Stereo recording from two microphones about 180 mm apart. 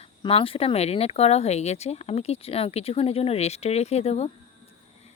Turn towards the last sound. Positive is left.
turn(degrees=35)  # may be behind; listen again after turning